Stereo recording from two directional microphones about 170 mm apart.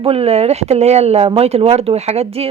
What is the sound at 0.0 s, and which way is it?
A woman's voice, 35° right (ahead or behind).